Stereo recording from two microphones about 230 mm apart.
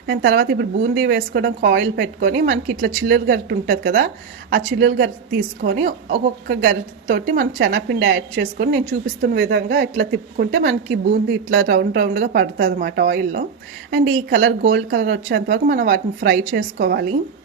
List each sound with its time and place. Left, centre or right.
0.1 s a woman's voice: right
5.6 s a woman's voice: right
11.5 s a woman's voice: right